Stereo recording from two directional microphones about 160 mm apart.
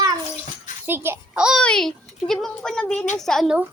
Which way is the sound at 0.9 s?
15° right (ahead or behind).